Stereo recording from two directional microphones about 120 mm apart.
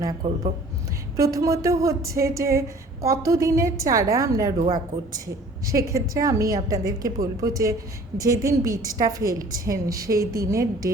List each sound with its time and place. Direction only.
0.2 s speech: 40° right (ahead or behind)
1.1 s a woman's voice: 25° right (ahead or behind)